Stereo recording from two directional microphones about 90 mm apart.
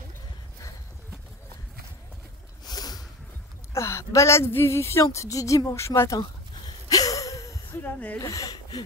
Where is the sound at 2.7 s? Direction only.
45° left (ahead or behind).